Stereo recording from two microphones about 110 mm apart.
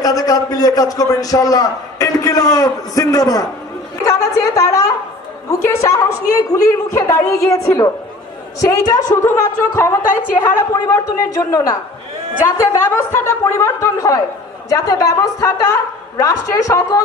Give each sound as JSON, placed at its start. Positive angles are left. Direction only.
{"t": 0.0, "sound": "a man's voice", "side_deg": 35}